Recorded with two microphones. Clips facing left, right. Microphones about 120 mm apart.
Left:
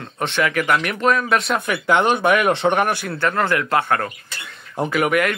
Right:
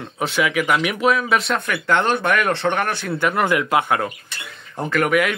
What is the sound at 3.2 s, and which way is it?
Speech, 15° right (ahead or behind).